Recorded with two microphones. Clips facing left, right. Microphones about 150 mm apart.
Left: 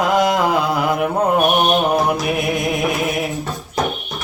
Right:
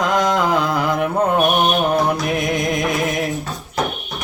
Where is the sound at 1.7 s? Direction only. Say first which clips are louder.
Left 1 dB; 10° left (ahead or behind).